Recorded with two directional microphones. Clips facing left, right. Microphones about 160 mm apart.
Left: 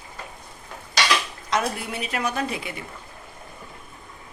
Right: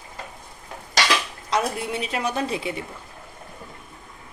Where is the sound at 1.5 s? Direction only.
30° right (ahead or behind).